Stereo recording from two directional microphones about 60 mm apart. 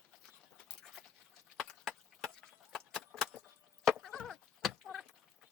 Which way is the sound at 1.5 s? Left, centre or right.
Centre.